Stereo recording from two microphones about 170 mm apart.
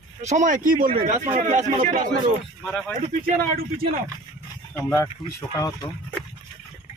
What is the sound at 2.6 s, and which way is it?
Speech, 5° left (ahead or behind).